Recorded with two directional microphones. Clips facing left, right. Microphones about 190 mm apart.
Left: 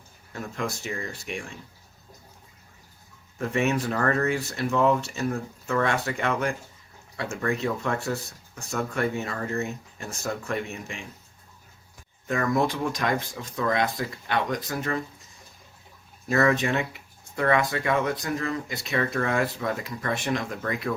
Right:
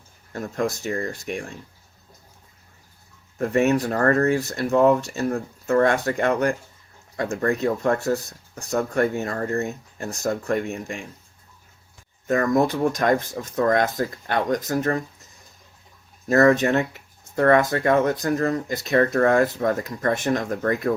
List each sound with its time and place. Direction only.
0.3 s speech: 40° right (ahead or behind)
3.3 s speech: 40° right (ahead or behind)
12.3 s speech: 45° right (ahead or behind)
16.3 s speech: 45° right (ahead or behind)